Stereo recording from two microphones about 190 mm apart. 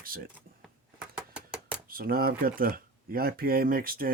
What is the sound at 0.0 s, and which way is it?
Speech, 50° right (ahead or behind).